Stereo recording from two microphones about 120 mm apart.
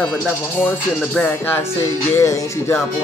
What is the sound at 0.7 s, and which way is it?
Music, 15° left (ahead or behind).